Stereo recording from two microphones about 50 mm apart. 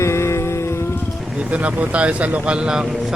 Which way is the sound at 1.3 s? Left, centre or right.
Right.